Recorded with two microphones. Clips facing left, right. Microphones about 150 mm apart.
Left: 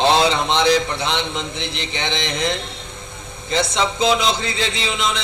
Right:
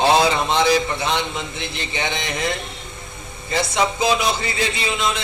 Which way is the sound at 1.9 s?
10° right (ahead or behind).